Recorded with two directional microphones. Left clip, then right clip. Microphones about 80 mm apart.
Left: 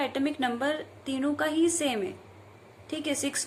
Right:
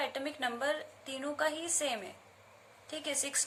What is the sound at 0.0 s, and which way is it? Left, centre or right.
A woman's voice, right.